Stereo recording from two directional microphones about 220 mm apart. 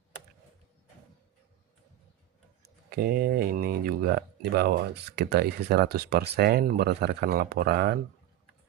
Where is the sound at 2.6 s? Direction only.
45° right (ahead or behind).